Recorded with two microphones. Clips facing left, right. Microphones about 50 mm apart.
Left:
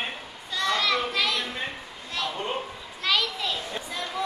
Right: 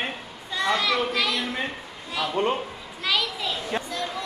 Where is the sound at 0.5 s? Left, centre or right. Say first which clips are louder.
Right 2 dB; centre.